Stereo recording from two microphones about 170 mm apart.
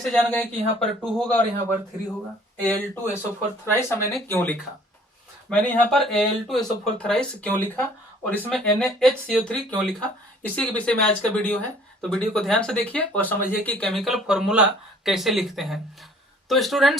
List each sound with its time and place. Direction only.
0.0 s speech: 5° left (ahead or behind)
2.6 s speech: 10° left (ahead or behind)